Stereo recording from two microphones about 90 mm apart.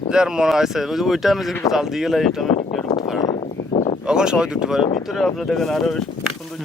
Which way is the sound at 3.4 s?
90° left.